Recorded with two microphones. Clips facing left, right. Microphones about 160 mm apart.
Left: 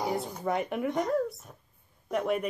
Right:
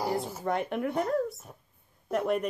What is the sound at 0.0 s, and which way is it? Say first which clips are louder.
Speech: even; centre (ahead or behind).